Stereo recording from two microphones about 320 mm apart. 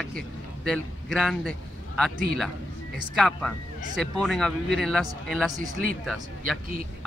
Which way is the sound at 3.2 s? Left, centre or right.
Centre.